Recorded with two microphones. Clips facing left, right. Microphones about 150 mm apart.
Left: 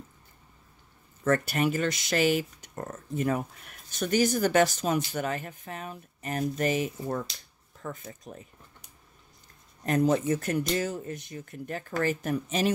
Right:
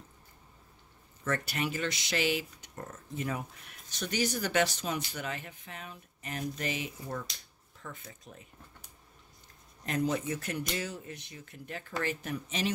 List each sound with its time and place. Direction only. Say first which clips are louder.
1.2 s speech: left 8 dB; 50° left (ahead or behind)
9.8 s speech: left 7 dB; 45° left (ahead or behind)